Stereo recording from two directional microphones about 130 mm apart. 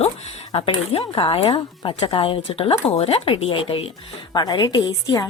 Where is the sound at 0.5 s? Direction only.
45° left (ahead or behind).